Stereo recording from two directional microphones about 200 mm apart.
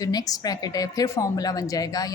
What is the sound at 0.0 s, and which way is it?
A woman's voice, 20° left (ahead or behind).